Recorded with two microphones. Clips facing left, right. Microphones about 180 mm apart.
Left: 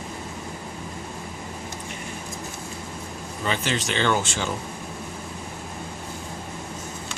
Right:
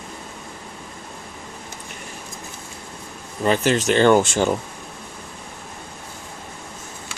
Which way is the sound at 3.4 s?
45° right (ahead or behind).